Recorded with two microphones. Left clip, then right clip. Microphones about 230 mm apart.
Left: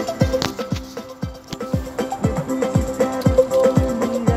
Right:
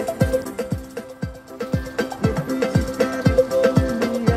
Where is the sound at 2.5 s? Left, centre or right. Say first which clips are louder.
Left 2 dB; right.